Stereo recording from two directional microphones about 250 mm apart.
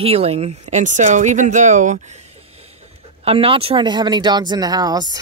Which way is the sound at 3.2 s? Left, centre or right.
Right.